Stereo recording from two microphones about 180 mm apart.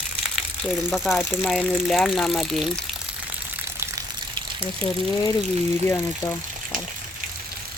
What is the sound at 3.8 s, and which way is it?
Water, 20° right (ahead or behind).